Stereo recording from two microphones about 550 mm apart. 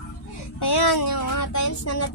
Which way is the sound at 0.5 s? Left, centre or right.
Left.